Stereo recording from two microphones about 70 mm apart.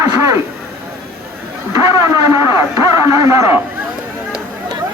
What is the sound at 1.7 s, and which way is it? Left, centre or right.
Speech, right.